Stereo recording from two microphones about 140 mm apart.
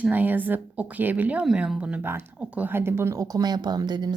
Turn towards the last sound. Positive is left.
turn(degrees=-30)  # may be behind; listen again after turning